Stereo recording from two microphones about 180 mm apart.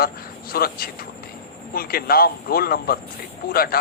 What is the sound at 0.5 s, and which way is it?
A man's voice, 55° left (ahead or behind).